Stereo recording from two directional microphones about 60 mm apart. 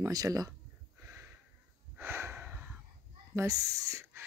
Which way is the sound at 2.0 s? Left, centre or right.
Right.